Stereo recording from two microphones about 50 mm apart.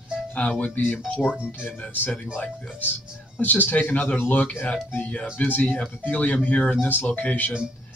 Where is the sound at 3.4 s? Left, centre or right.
Left.